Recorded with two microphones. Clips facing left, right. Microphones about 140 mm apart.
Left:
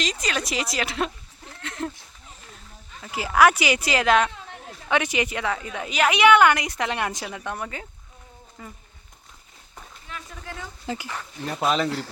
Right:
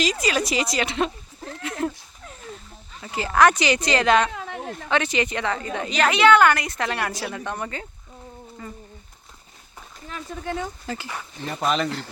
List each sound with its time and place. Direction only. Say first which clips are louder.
0.0 s speech: right 5 dB; 5° right (ahead or behind)
3.1 s a woman's voice: even; 10° left (ahead or behind)
4.3 s a sound: right 8 dB; 85° right
4.9 s a woman's voice: even; 10° left (ahead or behind)
7.3 s speech: right 2 dB; 5° left (ahead or behind)
10.1 s a sound: right 3 dB; 35° right (ahead or behind)
10.8 s a woman's voice: left 1 dB; 15° left (ahead or behind)
11.3 s speech: even; centre (ahead or behind)